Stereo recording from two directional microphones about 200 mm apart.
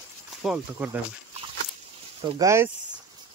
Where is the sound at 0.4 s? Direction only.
5° right (ahead or behind).